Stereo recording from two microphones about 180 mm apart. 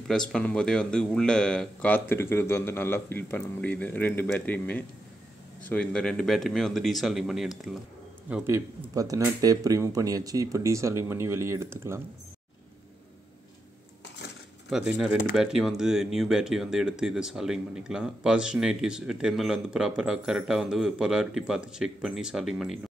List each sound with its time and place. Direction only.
0.1 s a man's voice: 5° left (ahead or behind); by 12.0 s 15° right (ahead or behind)
14.7 s speech: 5° right (ahead or behind)